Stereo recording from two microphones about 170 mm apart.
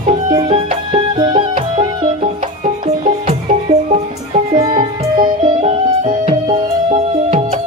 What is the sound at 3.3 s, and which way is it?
Music, 40° right (ahead or behind).